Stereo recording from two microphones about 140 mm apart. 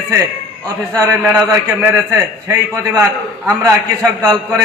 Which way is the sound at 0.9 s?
20° right (ahead or behind).